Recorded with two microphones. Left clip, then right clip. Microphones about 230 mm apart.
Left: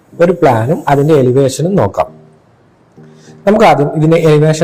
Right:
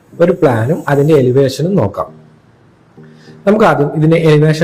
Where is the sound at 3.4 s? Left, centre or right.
Centre.